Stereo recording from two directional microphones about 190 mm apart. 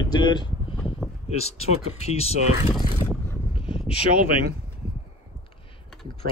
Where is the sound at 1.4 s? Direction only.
35° left (ahead or behind).